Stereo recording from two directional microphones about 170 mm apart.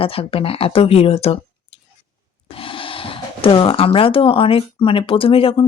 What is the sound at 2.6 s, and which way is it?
Speech, 30° left (ahead or behind).